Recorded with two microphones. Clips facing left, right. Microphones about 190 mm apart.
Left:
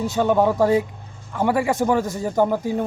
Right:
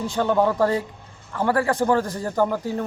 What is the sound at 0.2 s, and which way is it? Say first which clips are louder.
A man's voice: left 2 dB; 10° left (ahead or behind).